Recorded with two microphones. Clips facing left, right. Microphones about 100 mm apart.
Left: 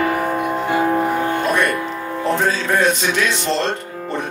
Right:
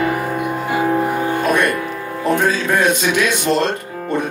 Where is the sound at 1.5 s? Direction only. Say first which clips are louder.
Right 3 dB; 15° right (ahead or behind).